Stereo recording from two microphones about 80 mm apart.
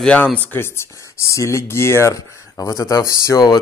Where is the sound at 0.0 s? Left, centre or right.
Centre.